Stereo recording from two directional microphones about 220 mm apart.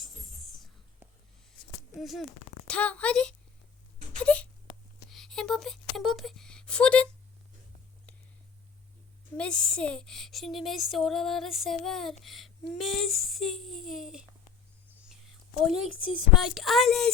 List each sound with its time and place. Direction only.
0.0 s whispering: centre (ahead or behind)
2.0 s speech: centre (ahead or behind)
9.4 s speech: 5° left (ahead or behind)
15.9 s speech: 65° right (ahead or behind)
16.4 s speech: centre (ahead or behind)